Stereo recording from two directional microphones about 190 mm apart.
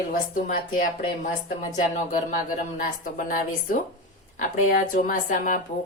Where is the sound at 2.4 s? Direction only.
45° left (ahead or behind).